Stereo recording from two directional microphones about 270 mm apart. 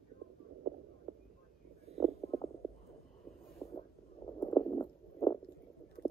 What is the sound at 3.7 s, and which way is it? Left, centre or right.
Stomach rumble, centre.